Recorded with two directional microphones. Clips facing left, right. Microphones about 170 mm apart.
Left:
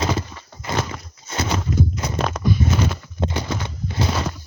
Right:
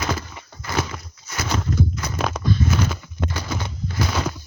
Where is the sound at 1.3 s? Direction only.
25° left (ahead or behind).